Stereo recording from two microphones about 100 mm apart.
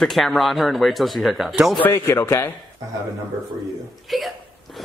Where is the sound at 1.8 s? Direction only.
25° left (ahead or behind).